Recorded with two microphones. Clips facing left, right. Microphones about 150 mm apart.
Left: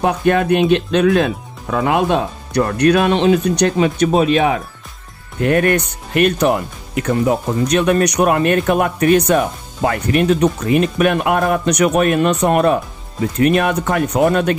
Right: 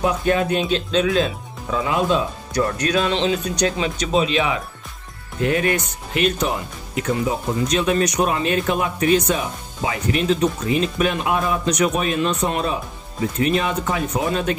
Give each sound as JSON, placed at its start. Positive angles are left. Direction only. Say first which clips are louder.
{"t": 0.0, "sound": "speech", "louder": "left 4 dB", "side_deg": 60}